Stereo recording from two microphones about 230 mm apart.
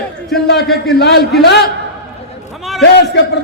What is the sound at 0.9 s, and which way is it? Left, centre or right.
Speech, left.